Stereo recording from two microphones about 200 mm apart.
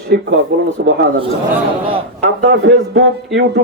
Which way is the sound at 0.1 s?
55° right (ahead or behind).